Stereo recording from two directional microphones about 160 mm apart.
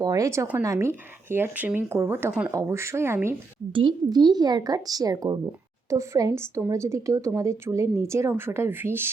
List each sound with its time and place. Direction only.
0.0 s speech: 20° right (ahead or behind)
3.7 s speech: 30° right (ahead or behind); by 9.0 s 15° right (ahead or behind)